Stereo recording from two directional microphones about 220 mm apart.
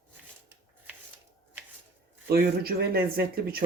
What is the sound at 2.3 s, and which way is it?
Speech, 45° right (ahead or behind).